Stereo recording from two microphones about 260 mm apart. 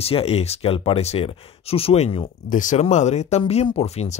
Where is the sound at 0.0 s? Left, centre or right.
Left.